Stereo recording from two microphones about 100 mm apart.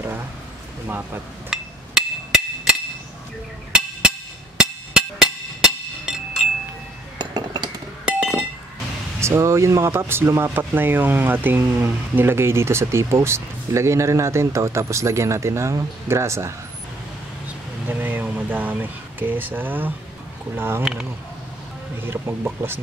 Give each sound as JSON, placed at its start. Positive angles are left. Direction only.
{"t": 0.8, "sound": "speech", "side_deg": -20}
{"t": 1.5, "sound": "hammer", "side_deg": -5}
{"t": 6.1, "sound": "wind chime", "side_deg": -5}
{"t": 7.2, "sound": "chink", "side_deg": -45}
{"t": 8.1, "sound": "chink", "side_deg": -10}
{"t": 9.2, "sound": "speech", "side_deg": -30}
{"t": 17.8, "sound": "speech", "side_deg": -20}
{"t": 20.8, "sound": "speech", "side_deg": -5}
{"t": 22.0, "sound": "speech", "side_deg": -20}